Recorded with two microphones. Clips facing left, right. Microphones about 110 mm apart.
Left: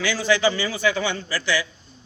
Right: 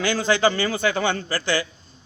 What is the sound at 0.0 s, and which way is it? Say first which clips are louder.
A man's voice: right 1 dB; 50° right (ahead or behind).